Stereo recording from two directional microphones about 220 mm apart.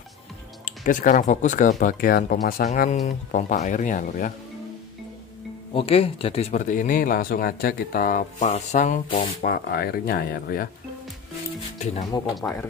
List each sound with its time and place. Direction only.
0.7 s speech: 35° left (ahead or behind)
5.8 s speech: 25° left (ahead or behind); by 10.7 s 45° left (ahead or behind)
12.4 s speech: 5° left (ahead or behind)